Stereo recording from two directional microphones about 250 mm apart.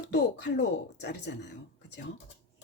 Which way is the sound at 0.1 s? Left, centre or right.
Left.